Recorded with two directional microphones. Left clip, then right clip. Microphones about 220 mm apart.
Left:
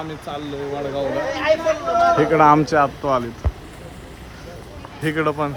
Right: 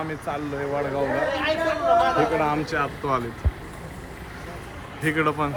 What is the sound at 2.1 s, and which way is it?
Speech, 35° left (ahead or behind).